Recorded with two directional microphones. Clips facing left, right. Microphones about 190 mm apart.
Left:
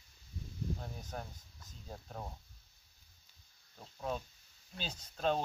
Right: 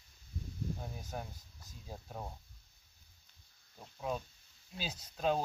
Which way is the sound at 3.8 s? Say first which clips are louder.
Right 1 dB; 5° right (ahead or behind).